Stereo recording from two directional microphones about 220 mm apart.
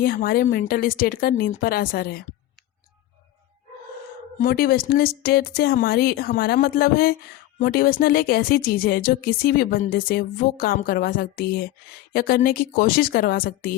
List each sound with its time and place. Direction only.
0.0 s a woman's voice: 40° left (ahead or behind)
4.4 s a woman's voice: 40° left (ahead or behind)